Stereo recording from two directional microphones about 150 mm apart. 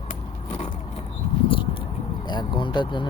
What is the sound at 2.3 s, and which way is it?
Vehicle, 30° left (ahead or behind).